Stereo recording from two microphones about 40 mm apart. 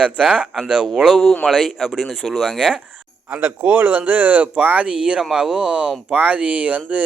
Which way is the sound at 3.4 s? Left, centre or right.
Right.